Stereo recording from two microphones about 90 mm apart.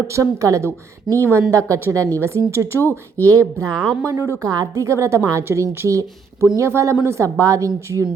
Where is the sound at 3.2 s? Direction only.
30° right (ahead or behind).